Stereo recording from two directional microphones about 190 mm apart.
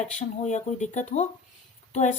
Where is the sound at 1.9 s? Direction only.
40° left (ahead or behind).